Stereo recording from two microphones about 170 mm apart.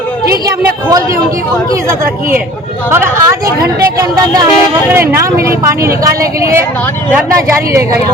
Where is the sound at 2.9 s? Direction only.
15° right (ahead or behind).